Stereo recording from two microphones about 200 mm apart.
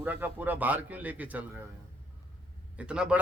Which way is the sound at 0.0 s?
10° right (ahead or behind).